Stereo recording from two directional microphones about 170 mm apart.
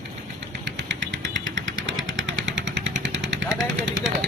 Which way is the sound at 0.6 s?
90° right.